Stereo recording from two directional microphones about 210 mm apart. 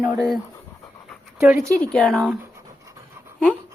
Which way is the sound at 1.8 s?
5° left (ahead or behind).